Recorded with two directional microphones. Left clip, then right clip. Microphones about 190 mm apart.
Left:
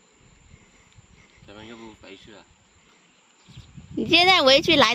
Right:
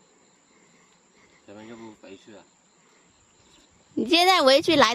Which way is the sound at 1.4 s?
5° right (ahead or behind).